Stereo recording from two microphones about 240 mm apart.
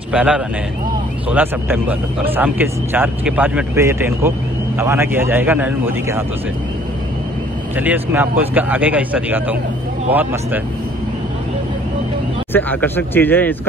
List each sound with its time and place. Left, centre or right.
0.1 s speech: centre
7.7 s speech: centre
12.5 s speech: centre